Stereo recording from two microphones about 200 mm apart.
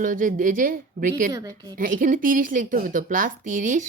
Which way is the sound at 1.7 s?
40° right (ahead or behind).